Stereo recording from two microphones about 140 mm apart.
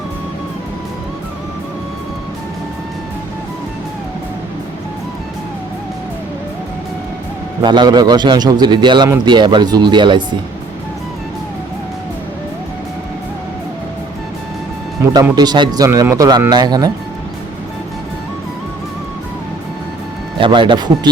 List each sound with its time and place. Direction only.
7.6 s a man's voice: 30° right (ahead or behind)
15.1 s speech: 30° right (ahead or behind)
20.4 s a man's voice: 35° right (ahead or behind)